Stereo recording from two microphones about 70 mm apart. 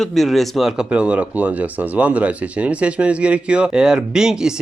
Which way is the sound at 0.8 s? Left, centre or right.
Centre.